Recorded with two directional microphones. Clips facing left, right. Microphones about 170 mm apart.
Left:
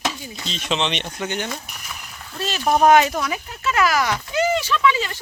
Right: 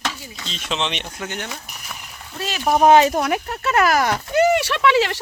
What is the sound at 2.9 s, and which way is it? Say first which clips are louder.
Speech: right 3 dB; 30° right (ahead or behind).